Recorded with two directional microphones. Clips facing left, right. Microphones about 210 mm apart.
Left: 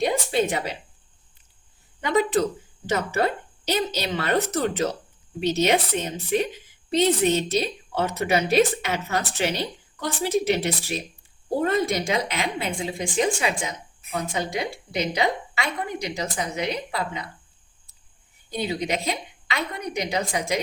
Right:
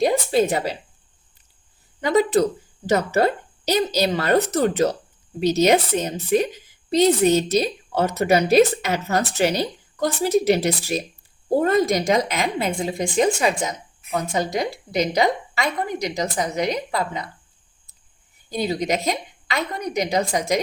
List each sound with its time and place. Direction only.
0.0 s speech: 40° right (ahead or behind)
2.0 s a woman's voice: 35° right (ahead or behind)
18.7 s a woman's voice: 40° right (ahead or behind)